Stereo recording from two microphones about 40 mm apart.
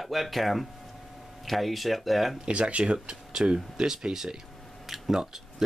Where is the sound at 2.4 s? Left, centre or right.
Right.